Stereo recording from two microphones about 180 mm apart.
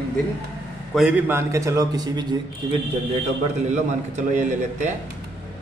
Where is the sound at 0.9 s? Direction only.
10° right (ahead or behind).